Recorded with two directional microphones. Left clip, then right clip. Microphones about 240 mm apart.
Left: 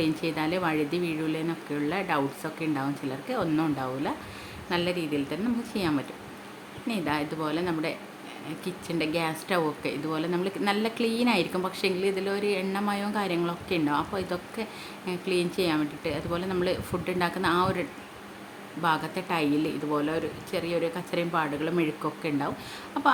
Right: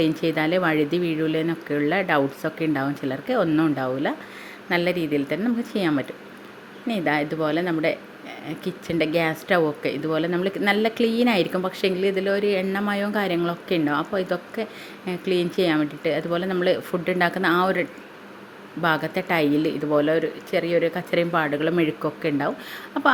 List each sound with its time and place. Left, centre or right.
0.0 s speech: centre